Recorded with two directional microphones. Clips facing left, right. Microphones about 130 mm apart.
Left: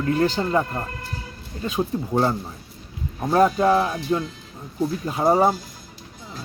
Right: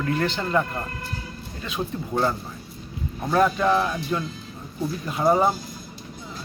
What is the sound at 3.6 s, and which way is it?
Speech, 20° left (ahead or behind).